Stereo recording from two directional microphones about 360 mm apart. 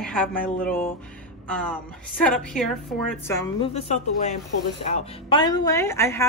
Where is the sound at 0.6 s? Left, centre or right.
Centre.